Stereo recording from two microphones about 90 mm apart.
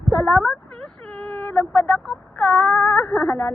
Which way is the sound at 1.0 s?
10° left (ahead or behind).